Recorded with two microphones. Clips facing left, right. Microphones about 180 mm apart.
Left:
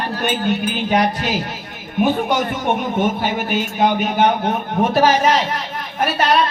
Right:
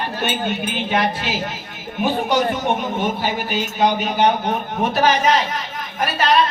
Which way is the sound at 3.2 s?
55° left (ahead or behind).